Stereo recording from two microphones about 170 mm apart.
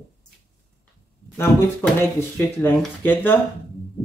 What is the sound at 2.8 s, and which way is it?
Speech, 10° left (ahead or behind).